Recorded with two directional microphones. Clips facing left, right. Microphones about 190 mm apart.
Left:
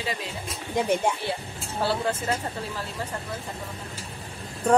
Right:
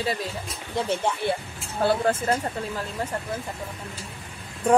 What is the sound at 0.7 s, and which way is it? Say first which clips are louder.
Speech: left 2 dB; 15° left (ahead or behind).